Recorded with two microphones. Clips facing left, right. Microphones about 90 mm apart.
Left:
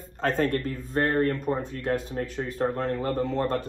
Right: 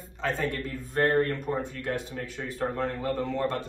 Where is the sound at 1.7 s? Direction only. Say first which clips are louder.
Left 4 dB; 40° left (ahead or behind).